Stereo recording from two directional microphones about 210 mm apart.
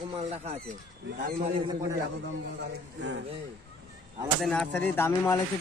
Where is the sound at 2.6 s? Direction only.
55° right (ahead or behind).